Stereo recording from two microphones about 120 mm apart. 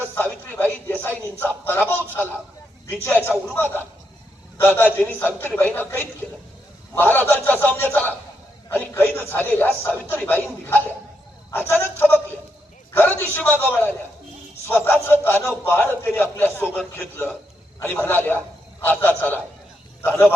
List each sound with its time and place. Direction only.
0.1 s a man's voice: 15° left (ahead or behind)
14.7 s a man's voice: 15° left (ahead or behind)